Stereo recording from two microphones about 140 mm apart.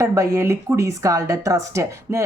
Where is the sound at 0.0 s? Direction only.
20° right (ahead or behind).